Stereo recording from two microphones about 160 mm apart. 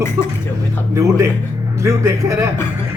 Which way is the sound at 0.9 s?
20° right (ahead or behind).